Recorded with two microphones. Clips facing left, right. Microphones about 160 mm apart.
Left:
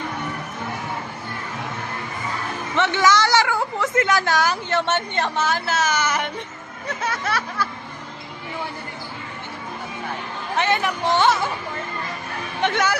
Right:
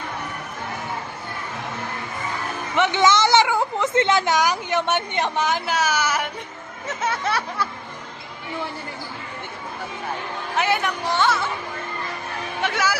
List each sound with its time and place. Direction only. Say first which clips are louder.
2.7 s a woman's voice: even; 15° right (ahead or behind)
7.0 s speech: right 2 dB; 25° right (ahead or behind)
10.6 s a woman's voice: left 1 dB; 5° right (ahead or behind)
11.0 s speech: left 5 dB; 20° left (ahead or behind)
12.6 s a woman's voice: left 3 dB; 5° right (ahead or behind)